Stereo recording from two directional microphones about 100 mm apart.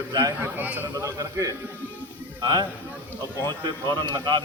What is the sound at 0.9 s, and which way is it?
Speech, 30° right (ahead or behind).